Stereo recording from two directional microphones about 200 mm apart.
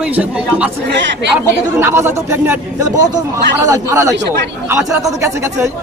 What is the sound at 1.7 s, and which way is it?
Speech, 10° right (ahead or behind).